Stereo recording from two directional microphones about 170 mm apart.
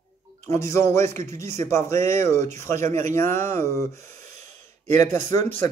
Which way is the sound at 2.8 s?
45° right (ahead or behind).